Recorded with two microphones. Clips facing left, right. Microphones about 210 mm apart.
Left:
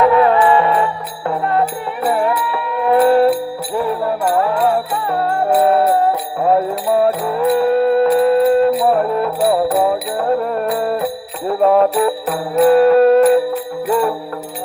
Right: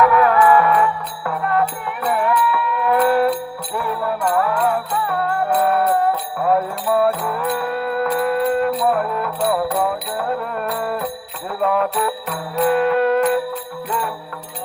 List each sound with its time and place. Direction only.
0.0 s music: 25° left (ahead or behind)